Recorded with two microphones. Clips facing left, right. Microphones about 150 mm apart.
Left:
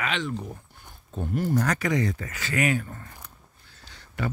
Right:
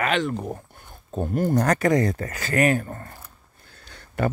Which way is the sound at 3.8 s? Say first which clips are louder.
Right 7 dB; 55° right (ahead or behind).